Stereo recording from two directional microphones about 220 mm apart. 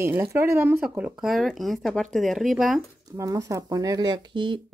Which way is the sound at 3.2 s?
15° right (ahead or behind).